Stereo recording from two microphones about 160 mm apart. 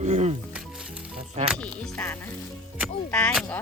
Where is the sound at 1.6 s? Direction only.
5° left (ahead or behind).